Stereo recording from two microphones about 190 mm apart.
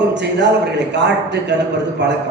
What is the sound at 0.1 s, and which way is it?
A man's voice, 65° right (ahead or behind).